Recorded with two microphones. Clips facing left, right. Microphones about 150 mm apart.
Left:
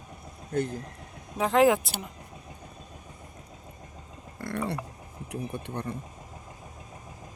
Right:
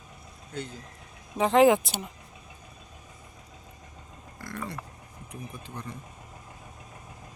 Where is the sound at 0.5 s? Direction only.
50° left (ahead or behind).